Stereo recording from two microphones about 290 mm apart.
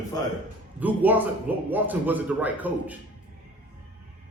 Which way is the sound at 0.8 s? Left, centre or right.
Centre.